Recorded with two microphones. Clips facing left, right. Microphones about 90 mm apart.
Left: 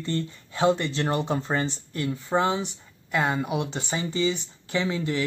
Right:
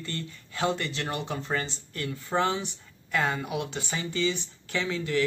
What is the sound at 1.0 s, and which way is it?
Speech, 35° left (ahead or behind).